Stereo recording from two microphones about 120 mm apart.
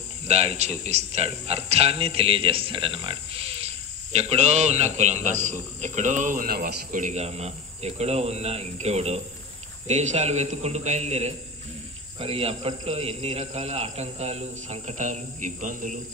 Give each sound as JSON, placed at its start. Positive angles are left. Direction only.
{"t": 0.3, "sound": "a man's voice", "side_deg": -60}
{"t": 7.0, "sound": "a man's voice", "side_deg": -80}
{"t": 12.2, "sound": "a man's voice", "side_deg": -55}